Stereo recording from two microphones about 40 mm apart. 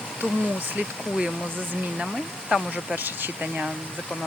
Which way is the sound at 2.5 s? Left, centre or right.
Right.